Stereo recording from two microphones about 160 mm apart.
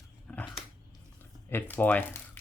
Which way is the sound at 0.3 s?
10° left (ahead or behind).